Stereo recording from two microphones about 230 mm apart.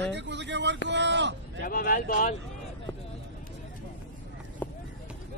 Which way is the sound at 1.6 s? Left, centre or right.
Left.